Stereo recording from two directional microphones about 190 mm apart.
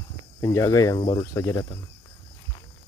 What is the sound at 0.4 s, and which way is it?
Speech, 15° left (ahead or behind).